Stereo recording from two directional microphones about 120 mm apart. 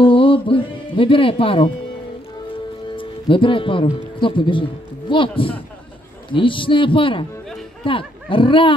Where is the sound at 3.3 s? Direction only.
45° left (ahead or behind).